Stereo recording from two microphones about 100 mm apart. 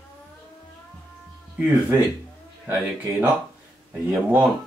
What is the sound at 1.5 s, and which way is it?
Speech, 10° right (ahead or behind).